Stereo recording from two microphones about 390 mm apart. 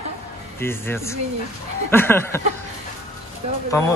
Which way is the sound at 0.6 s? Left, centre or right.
Centre.